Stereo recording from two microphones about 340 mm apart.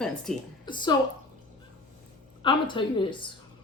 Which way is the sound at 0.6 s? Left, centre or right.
Centre.